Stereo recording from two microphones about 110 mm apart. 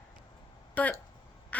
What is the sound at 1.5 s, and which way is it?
Duck, 15° left (ahead or behind).